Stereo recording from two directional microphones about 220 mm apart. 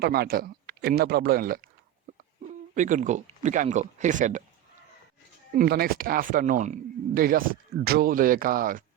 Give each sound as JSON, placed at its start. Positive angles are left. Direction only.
{"t": 0.0, "sound": "speech", "side_deg": -45}
{"t": 2.7, "sound": "speech", "side_deg": -35}
{"t": 5.5, "sound": "speech", "side_deg": -45}